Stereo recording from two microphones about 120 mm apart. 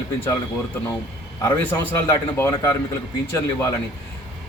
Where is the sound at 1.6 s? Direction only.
20° left (ahead or behind).